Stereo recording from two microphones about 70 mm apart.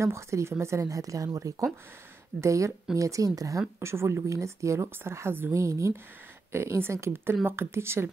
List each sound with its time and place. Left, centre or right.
0.0 s a woman's voice: right
3.8 s speech: right
5.5 s speech: right